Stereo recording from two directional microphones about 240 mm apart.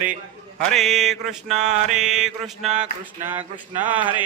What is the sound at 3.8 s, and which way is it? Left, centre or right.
Speech, centre.